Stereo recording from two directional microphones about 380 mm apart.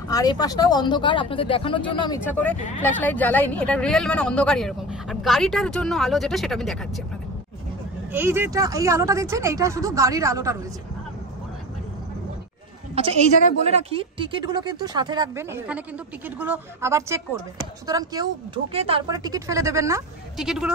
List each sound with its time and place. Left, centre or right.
0.1 s speech: centre
8.1 s speech: centre
12.9 s speech: centre